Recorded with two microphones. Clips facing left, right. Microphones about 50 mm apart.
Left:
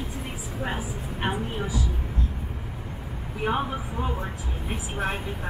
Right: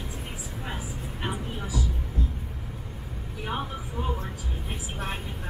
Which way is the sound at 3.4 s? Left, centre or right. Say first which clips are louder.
Left 6 dB; left.